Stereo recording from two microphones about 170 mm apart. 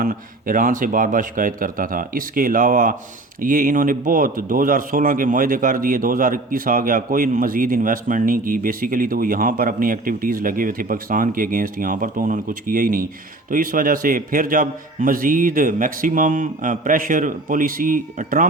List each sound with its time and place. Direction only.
0.0 s a man's voice: 55° right (ahead or behind)